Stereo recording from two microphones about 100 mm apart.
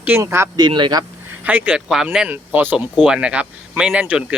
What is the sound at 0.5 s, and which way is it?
Speech, 50° right (ahead or behind).